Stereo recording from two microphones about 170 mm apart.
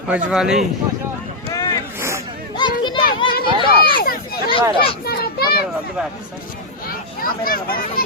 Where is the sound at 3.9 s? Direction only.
60° left (ahead or behind).